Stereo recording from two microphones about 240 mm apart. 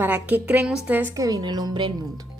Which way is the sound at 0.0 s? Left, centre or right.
Centre.